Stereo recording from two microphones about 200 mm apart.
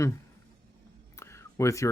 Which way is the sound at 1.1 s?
15° left (ahead or behind).